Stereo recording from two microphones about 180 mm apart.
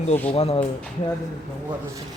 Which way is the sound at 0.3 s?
35° left (ahead or behind).